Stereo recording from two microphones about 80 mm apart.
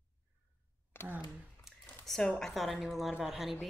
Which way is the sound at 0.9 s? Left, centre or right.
Left.